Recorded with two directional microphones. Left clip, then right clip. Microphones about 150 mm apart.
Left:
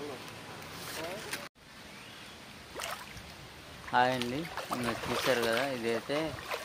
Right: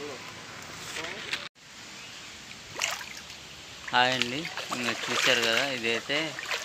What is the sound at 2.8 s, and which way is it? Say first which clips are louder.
Rowboat: right 8 dB; 25° left (ahead or behind).